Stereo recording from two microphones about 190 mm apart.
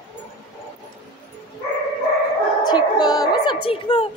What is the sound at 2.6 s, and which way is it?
Music, 20° left (ahead or behind).